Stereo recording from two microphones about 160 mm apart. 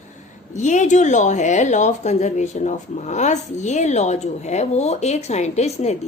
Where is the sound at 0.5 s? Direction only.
50° left (ahead or behind).